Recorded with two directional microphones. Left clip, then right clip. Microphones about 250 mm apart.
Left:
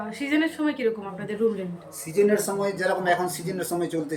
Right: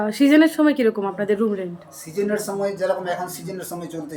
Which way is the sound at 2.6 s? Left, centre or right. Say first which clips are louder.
Right 3 dB; centre.